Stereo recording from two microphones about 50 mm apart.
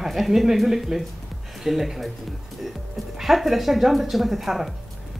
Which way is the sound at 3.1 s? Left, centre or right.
Centre.